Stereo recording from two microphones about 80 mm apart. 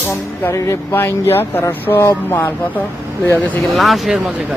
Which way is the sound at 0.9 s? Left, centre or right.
Left.